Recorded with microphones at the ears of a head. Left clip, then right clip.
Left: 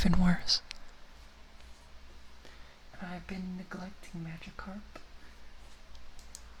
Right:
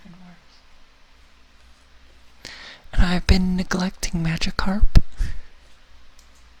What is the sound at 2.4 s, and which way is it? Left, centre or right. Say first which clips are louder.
Speech: right 19 dB; right.